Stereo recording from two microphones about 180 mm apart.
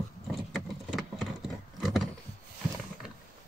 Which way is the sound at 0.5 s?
Centre (ahead or behind).